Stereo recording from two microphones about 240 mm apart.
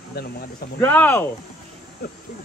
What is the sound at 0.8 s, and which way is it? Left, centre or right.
Speech, centre.